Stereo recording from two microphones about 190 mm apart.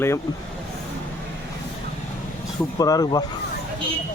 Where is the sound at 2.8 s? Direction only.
20° left (ahead or behind).